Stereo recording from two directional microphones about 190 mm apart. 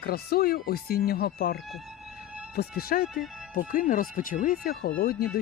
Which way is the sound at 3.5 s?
45° left (ahead or behind).